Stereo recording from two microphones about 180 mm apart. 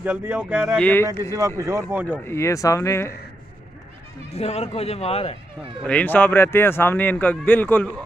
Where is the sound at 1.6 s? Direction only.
15° right (ahead or behind).